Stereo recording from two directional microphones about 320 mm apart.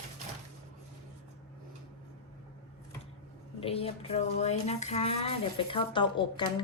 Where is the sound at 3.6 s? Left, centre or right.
Centre.